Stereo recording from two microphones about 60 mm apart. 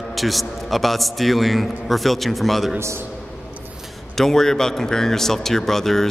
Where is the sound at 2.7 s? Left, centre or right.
Right.